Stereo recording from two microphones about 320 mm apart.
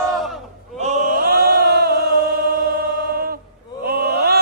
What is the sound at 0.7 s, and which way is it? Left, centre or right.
Chant, right.